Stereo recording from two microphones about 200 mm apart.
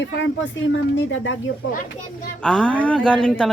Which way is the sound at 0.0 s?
70° left (ahead or behind).